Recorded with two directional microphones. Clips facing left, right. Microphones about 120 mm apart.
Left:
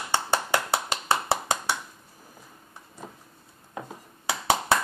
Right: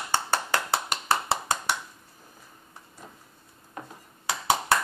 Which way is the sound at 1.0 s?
20° left (ahead or behind).